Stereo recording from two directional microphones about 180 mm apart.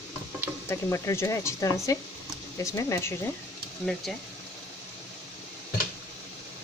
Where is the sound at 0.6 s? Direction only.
15° left (ahead or behind).